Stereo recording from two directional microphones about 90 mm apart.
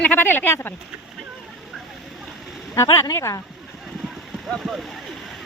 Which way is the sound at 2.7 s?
30° left (ahead or behind).